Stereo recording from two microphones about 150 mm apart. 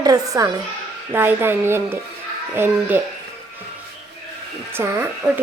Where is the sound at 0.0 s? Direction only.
25° right (ahead or behind).